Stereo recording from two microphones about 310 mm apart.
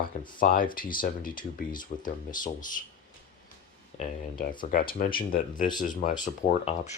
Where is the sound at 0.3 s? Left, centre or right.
Left.